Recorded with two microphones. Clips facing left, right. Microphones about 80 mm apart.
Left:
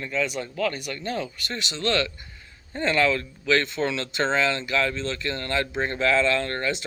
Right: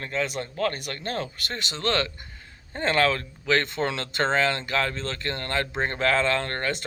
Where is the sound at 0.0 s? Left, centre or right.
Right.